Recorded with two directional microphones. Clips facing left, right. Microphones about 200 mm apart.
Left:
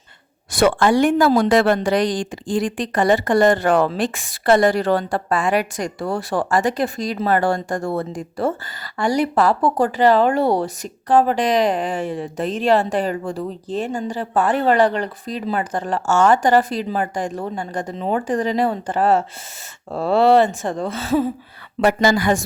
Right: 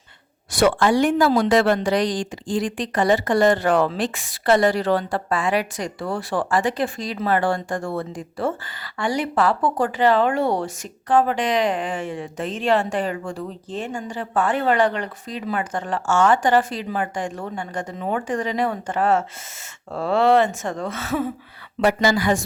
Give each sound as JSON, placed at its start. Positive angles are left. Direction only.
{"t": 0.5, "sound": "a woman's voice", "side_deg": 50}
{"t": 22.2, "sound": "music", "side_deg": 50}